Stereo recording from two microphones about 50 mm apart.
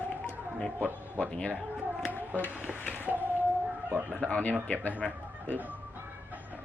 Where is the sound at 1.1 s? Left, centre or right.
Left.